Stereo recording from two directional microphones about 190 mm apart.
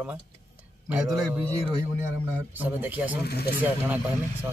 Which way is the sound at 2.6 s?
10° right (ahead or behind).